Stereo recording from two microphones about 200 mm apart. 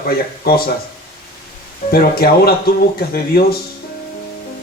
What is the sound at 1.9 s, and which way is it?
Speech, 50° left (ahead or behind).